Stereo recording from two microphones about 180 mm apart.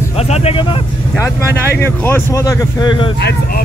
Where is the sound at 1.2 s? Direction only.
15° left (ahead or behind).